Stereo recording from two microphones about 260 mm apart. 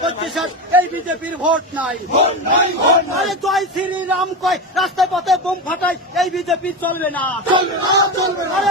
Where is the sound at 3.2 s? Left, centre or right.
Centre.